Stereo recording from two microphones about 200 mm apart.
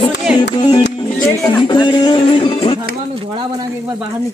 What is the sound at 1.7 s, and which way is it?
Music, 20° left (ahead or behind).